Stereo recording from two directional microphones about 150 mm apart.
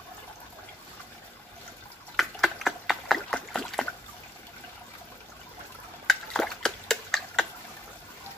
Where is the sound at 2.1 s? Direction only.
Centre (ahead or behind).